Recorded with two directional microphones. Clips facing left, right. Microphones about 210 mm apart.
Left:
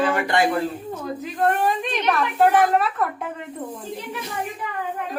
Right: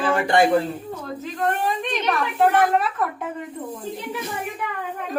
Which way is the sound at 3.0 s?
Centre (ahead or behind).